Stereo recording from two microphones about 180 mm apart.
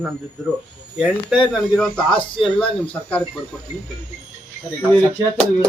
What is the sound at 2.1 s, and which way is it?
Speech, 30° left (ahead or behind).